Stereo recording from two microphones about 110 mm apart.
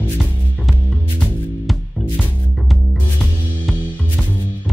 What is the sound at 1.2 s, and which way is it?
Music, 5° left (ahead or behind).